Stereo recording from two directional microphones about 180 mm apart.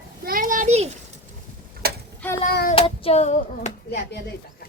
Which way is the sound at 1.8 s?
60° right (ahead or behind).